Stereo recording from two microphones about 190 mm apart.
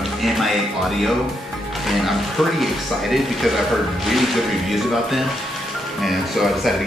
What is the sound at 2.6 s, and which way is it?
Speech, centre (ahead or behind).